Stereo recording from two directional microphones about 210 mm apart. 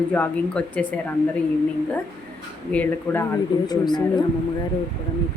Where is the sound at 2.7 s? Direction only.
10° left (ahead or behind).